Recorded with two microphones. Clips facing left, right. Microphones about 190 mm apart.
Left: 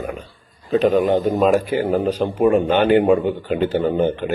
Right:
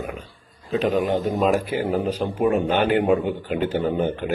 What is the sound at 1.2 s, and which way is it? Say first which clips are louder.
Speech: left 4 dB; centre (ahead or behind).